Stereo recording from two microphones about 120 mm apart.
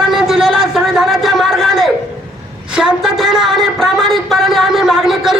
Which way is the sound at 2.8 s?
5° right (ahead or behind).